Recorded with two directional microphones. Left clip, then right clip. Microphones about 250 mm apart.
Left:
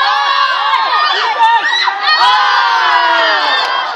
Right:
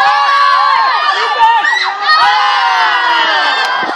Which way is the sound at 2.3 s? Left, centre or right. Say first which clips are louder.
Even; right.